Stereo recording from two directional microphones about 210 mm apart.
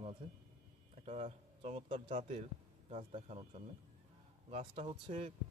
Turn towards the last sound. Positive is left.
turn(degrees=-30)  # may be behind; listen again after turning